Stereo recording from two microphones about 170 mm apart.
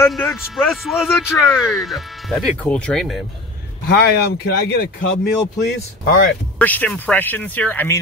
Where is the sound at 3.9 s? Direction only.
70° left (ahead or behind).